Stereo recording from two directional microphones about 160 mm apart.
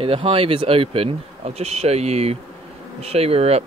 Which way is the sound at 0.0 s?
35° right (ahead or behind).